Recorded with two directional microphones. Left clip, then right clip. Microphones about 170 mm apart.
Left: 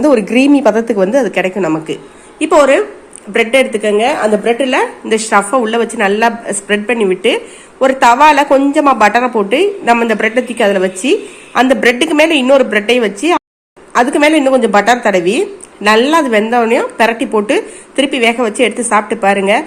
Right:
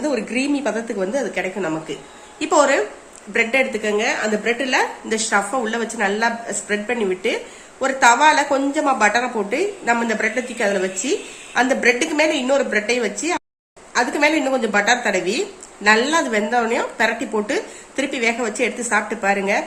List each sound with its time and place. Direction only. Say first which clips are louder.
0.1 s a woman's voice: left 12 dB; 40° left (ahead or behind)
2.5 s a woman's voice: left 8 dB; 15° left (ahead or behind)